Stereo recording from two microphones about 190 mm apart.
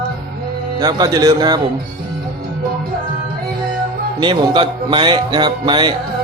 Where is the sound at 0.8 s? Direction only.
20° right (ahead or behind).